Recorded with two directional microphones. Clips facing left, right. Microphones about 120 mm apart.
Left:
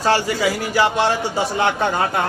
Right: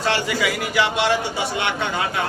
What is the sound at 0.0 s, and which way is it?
A man's voice, 40° left (ahead or behind).